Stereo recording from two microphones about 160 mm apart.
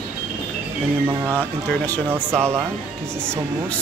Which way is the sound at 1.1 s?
15° right (ahead or behind).